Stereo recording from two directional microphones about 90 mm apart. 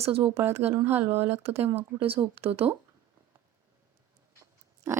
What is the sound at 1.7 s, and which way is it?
Speech, 90° right.